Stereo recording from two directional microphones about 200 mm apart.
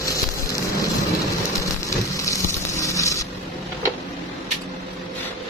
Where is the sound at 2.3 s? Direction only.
15° left (ahead or behind).